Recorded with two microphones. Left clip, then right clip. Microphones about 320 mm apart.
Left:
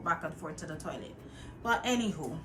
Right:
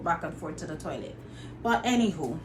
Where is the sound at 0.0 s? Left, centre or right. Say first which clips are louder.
Right 4 dB; centre.